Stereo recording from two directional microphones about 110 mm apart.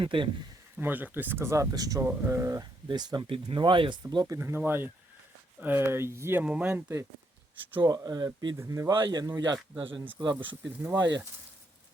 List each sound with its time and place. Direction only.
0.0 s speech: 50° right (ahead or behind)
0.8 s speech: 15° right (ahead or behind); by 3.2 s 40° right (ahead or behind)
3.2 s speech: 50° right (ahead or behind)
4.1 s speech: 35° right (ahead or behind)
4.4 s speech: 20° right (ahead or behind)
6.4 s speech: 10° right (ahead or behind)
7.9 s speech: 35° right (ahead or behind)
8.5 s speech: 25° right (ahead or behind)
8.9 s speech: 40° right (ahead or behind)
9.7 s speech: 50° right (ahead or behind)